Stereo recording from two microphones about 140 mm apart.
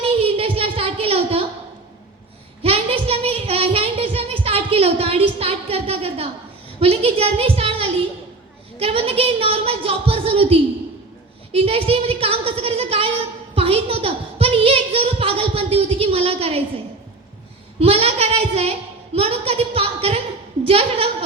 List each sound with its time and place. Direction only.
0.0 s a sound: 40° right (ahead or behind)
2.6 s child singing: 45° right (ahead or behind)
6.7 s a woman's voice: 45° right (ahead or behind)
17.7 s speech: 45° right (ahead or behind)